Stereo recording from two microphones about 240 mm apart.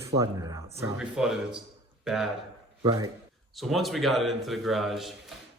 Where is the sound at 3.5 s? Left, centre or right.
Centre.